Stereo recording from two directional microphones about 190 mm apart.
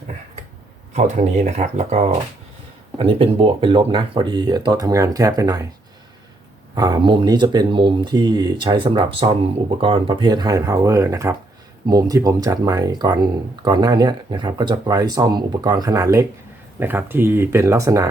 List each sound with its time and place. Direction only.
0.9 s speech: 40° right (ahead or behind); by 5.6 s 20° right (ahead or behind)
6.7 s speech: 20° right (ahead or behind)